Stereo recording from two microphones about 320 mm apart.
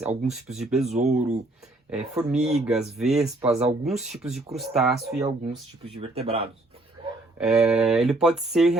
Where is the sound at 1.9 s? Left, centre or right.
Centre.